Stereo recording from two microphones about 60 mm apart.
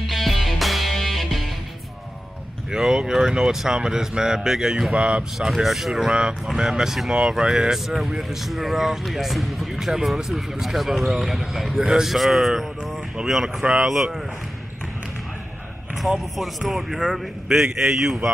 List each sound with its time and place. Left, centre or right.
0.1 s music: centre
2.7 s speech: centre
4.9 s speech: centre
5.5 s speech: centre
16.3 s speech: centre